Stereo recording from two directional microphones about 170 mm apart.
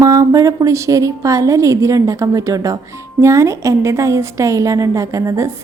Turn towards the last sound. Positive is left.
turn(degrees=-20)  # may be behind; listen again after turning